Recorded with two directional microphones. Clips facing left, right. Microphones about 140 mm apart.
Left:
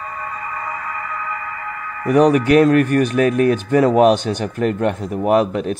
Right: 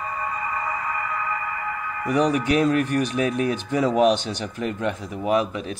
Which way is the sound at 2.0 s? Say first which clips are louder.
Left 8 dB; 55° left (ahead or behind).